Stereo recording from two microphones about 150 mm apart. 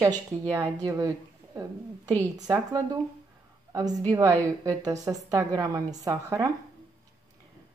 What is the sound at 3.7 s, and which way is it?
A woman's voice, 25° right (ahead or behind).